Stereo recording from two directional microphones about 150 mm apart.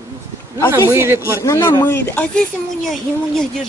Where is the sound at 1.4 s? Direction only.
20° left (ahead or behind).